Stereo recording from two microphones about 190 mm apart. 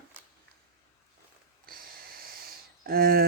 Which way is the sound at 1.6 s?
50° right (ahead or behind).